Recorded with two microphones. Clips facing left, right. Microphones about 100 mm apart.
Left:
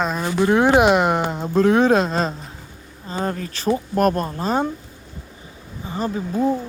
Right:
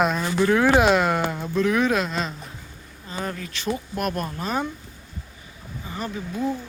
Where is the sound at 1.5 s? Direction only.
35° left (ahead or behind).